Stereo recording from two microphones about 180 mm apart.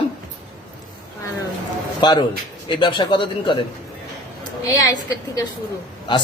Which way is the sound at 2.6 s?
25° left (ahead or behind).